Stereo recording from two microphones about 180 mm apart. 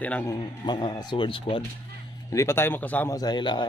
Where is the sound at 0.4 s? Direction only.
25° left (ahead or behind).